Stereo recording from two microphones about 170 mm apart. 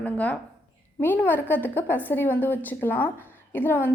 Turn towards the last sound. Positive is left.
turn(degrees=10)  # may be behind; listen again after turning